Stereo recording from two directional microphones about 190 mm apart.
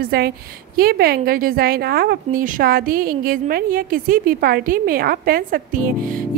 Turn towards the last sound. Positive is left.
turn(degrees=-45)  # may be behind; listen again after turning